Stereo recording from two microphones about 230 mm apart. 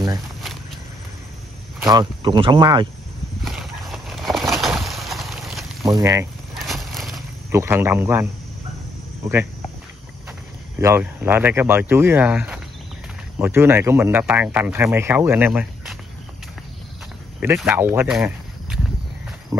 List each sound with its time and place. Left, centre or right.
1.9 s speech: centre
3.4 s a sound: centre
5.9 s speech: centre
6.6 s vehicle: centre
7.5 s speech: centre
10.8 s speech: centre
17.4 s speech: centre